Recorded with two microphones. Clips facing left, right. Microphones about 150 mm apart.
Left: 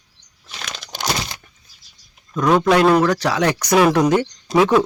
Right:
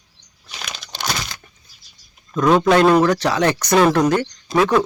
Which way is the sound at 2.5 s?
5° right (ahead or behind).